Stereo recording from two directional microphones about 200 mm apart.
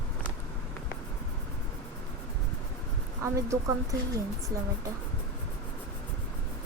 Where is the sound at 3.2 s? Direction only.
15° right (ahead or behind).